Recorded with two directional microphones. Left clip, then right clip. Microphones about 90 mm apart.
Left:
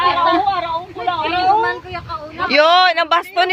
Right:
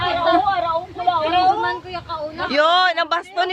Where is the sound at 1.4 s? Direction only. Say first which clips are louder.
Left 6 dB; 20° left (ahead or behind).